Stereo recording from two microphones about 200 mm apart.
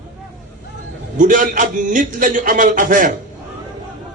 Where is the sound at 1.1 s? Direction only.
40° right (ahead or behind).